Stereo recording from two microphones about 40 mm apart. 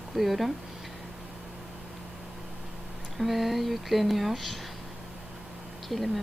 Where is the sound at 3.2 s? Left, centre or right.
Centre.